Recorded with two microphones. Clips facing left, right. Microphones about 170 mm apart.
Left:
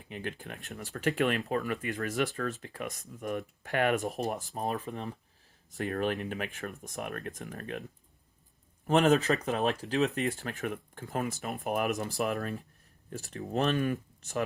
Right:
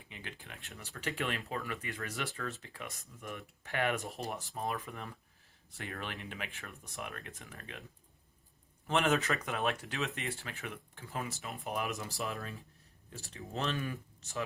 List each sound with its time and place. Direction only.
0.1 s speech: 50° left (ahead or behind)
8.9 s speech: 40° left (ahead or behind)
12.3 s speech: 60° left (ahead or behind)
13.3 s speech: 50° left (ahead or behind)